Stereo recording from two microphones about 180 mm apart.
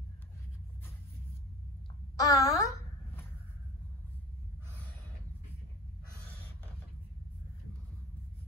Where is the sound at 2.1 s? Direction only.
20° left (ahead or behind).